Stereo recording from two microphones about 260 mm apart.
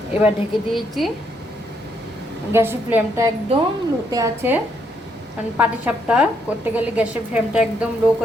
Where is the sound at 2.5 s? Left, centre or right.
Centre.